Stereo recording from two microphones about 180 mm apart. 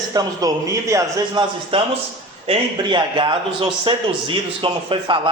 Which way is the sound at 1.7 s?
30° right (ahead or behind).